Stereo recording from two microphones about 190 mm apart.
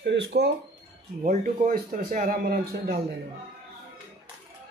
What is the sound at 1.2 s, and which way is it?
Speech, 45° right (ahead or behind).